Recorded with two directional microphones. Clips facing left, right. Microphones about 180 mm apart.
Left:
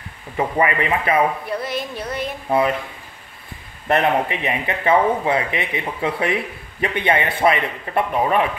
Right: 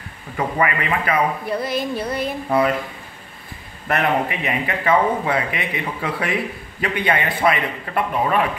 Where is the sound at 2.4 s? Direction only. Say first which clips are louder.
Left 1 dB; 25° left (ahead or behind).